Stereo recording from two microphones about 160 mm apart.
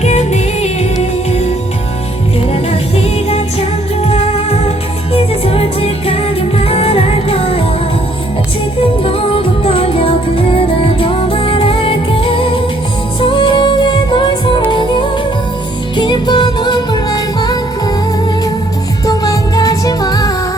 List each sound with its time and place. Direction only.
0.0 s music: 45° left (ahead or behind)
5.1 s music: 40° left (ahead or behind)
9.0 s music: 35° left (ahead or behind)
19.0 s music: 25° left (ahead or behind)